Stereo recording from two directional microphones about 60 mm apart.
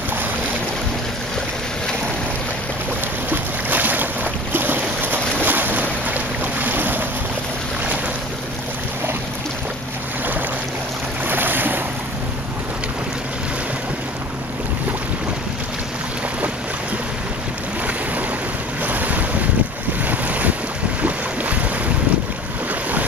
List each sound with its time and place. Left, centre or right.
3.3 s boat: right
11.2 s boat: right
18.9 s wind: right
20.1 s boat: right